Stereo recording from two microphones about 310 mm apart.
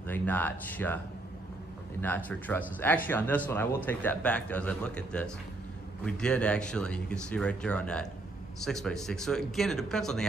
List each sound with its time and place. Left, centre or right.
0.0 s speech: centre